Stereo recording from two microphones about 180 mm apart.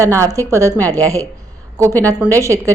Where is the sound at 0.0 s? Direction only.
15° right (ahead or behind).